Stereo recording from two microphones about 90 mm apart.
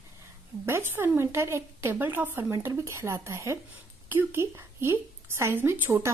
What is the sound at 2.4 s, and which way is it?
A woman's voice, 35° right (ahead or behind).